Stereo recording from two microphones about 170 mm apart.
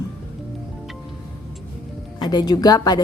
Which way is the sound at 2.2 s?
25° left (ahead or behind).